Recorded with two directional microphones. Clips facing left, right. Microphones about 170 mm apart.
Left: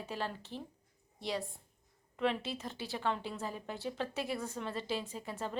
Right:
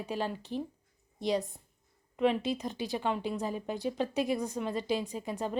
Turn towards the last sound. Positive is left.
turn(degrees=-15)  # may be behind; listen again after turning